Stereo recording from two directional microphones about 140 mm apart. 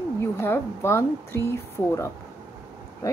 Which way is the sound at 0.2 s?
15° left (ahead or behind).